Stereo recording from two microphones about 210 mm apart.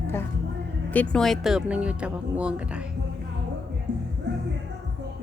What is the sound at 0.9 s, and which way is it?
Speech, 5° left (ahead or behind).